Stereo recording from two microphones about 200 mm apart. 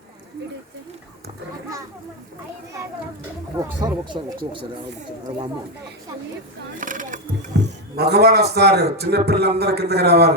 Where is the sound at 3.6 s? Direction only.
20° right (ahead or behind).